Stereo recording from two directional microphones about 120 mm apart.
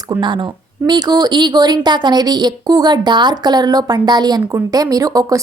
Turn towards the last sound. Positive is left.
turn(degrees=-30)  # may be behind; listen again after turning